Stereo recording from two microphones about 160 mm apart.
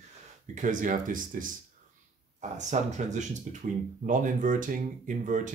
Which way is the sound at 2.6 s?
45° right (ahead or behind).